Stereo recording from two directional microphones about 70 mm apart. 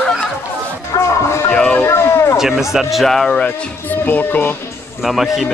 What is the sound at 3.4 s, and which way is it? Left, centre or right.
Speech, left.